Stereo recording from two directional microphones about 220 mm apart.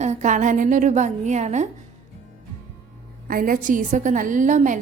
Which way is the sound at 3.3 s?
40° right (ahead or behind).